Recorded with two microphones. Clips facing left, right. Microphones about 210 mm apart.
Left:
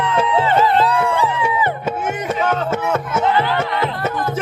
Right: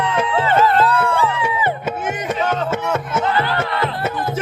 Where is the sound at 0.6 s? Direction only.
15° left (ahead or behind).